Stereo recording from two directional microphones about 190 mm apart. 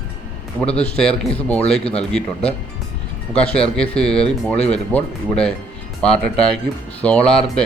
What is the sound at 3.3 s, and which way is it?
Speech, 5° left (ahead or behind).